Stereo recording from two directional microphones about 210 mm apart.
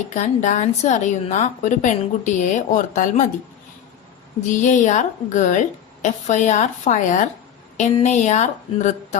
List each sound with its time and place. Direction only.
0.1 s a woman's voice: 35° left (ahead or behind)
4.4 s a woman's voice: 35° left (ahead or behind)